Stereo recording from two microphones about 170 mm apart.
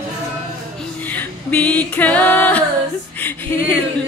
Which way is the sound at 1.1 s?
10° left (ahead or behind).